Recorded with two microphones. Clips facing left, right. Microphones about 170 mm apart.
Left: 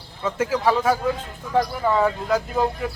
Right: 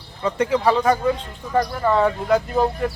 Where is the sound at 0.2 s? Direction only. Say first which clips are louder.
Right 3 dB; centre (ahead or behind).